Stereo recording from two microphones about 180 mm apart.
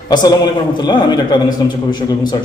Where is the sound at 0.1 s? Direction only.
25° left (ahead or behind).